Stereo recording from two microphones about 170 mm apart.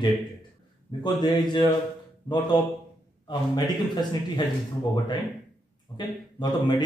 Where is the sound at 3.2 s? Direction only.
25° left (ahead or behind).